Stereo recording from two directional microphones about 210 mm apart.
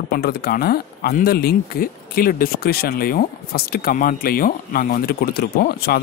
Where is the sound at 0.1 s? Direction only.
45° left (ahead or behind).